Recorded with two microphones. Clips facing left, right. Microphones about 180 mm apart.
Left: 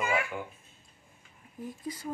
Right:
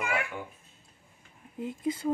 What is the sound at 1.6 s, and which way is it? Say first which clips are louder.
Speech: right 7 dB; 25° right (ahead or behind).